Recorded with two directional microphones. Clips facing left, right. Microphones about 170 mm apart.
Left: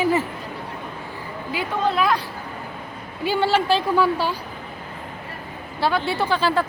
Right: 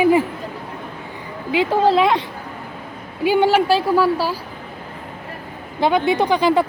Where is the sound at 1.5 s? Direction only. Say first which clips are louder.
Right 7 dB; 30° right (ahead or behind).